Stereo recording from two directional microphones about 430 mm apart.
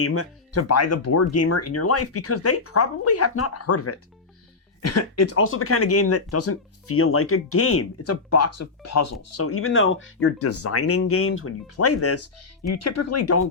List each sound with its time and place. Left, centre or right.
0.0 s speech: left